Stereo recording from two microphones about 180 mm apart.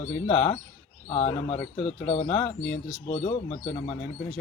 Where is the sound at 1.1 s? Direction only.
35° left (ahead or behind).